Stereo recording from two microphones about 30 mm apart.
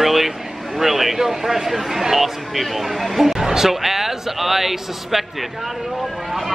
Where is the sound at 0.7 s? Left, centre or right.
Centre.